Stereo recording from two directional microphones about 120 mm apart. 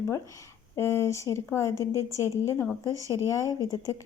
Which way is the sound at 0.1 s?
25° left (ahead or behind).